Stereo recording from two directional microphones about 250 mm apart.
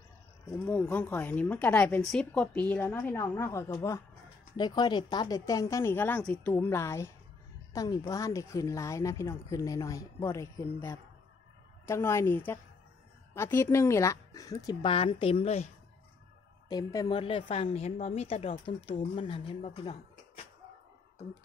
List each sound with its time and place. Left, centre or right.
0.5 s speech: centre; by 15.7 s left
16.6 s a woman's voice: centre